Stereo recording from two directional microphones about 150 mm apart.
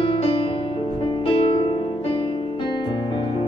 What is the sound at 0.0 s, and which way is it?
Music, 35° left (ahead or behind).